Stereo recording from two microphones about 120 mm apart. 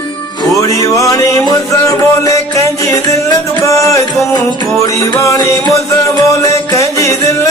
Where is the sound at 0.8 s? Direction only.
30° left (ahead or behind).